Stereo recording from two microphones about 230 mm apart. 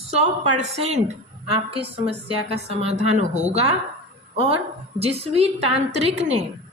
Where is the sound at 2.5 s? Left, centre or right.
Right.